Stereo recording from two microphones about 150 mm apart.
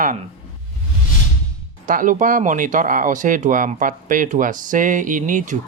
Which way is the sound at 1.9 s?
60° right (ahead or behind).